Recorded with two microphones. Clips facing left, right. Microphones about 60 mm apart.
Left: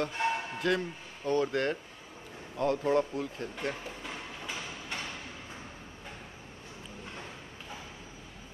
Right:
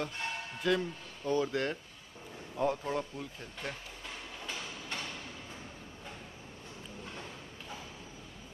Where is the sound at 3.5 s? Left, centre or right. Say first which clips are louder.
Left 6 dB; left.